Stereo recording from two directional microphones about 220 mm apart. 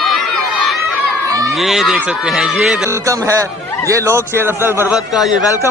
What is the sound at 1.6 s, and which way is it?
Speech, centre (ahead or behind).